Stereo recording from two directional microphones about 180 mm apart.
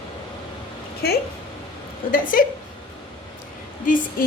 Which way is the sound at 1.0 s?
60° left (ahead or behind).